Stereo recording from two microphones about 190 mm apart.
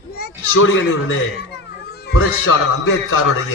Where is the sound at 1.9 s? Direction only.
55° left (ahead or behind); by 3.4 s 90° left.